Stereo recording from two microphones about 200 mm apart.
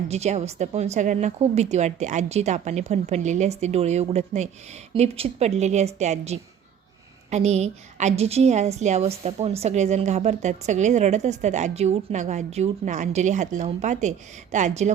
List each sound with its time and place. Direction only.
0.1 s a woman's voice: 35° right (ahead or behind)